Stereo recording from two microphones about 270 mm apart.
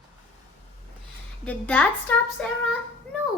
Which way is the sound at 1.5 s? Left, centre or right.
Centre.